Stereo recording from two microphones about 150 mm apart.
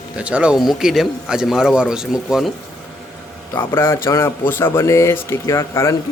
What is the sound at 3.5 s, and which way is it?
Speech, 15° left (ahead or behind).